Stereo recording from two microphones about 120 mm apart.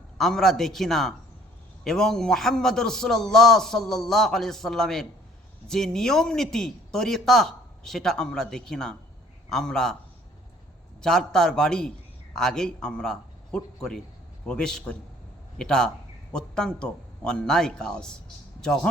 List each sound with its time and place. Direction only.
0.2 s speech: 5° left (ahead or behind)
11.0 s a man's voice: 5° left (ahead or behind)